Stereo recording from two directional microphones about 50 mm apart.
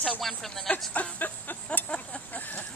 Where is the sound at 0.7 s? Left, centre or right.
Left.